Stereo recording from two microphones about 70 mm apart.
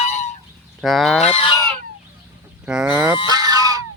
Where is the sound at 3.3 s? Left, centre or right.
Right.